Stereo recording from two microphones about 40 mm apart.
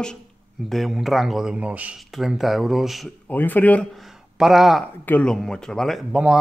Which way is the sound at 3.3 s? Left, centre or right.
Left.